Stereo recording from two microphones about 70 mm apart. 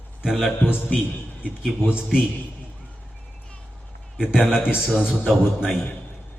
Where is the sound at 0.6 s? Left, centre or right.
Left.